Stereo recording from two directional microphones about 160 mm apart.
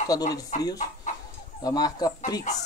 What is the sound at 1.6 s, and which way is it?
Speech, 25° left (ahead or behind).